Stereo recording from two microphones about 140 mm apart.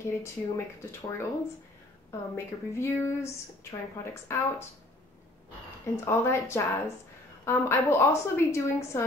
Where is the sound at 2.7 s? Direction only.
20° left (ahead or behind).